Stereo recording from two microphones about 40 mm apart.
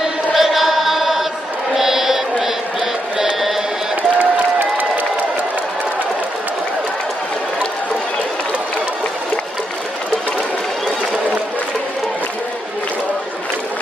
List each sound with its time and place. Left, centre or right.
0.3 s chant: centre
1.7 s a sound: centre
4.2 s crowd: right